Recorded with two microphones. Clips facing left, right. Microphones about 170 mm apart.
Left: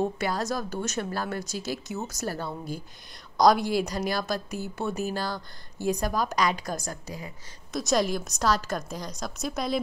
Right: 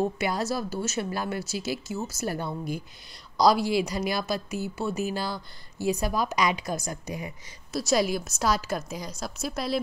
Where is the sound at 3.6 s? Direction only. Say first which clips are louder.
Right 1 dB; 45° left (ahead or behind).